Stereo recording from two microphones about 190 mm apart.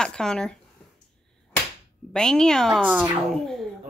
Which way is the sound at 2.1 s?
5° left (ahead or behind).